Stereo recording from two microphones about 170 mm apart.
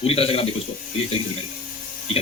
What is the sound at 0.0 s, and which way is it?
Speech, 35° left (ahead or behind).